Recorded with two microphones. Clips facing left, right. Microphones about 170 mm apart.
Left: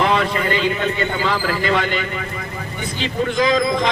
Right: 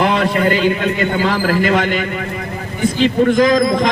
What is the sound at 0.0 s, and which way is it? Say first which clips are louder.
A man's voice: right 4 dB; 50° right (ahead or behind).